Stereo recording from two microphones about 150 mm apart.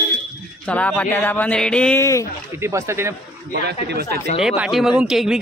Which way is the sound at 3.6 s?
90° right.